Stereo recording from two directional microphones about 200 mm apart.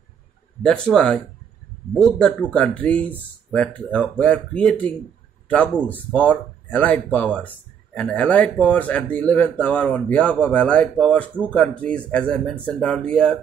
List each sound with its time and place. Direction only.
0.6 s speech: 5° left (ahead or behind)